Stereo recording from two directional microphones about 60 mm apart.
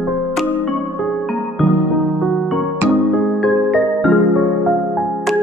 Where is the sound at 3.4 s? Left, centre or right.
Centre.